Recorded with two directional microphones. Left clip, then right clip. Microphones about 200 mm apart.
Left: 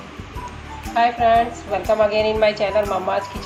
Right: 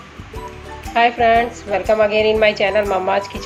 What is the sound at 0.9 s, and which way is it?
A woman's voice, 45° right (ahead or behind).